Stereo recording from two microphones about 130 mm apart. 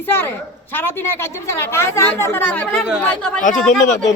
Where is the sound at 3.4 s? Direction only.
80° left.